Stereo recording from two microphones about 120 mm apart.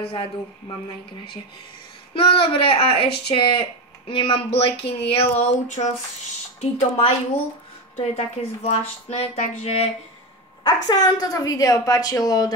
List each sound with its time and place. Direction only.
2.1 s speech: 50° left (ahead or behind); by 5.9 s 75° left (ahead or behind)
6.6 s speech: 60° left (ahead or behind)
10.6 s a woman's voice: 35° left (ahead or behind)